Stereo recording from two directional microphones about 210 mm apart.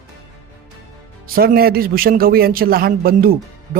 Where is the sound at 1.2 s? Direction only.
45° right (ahead or behind).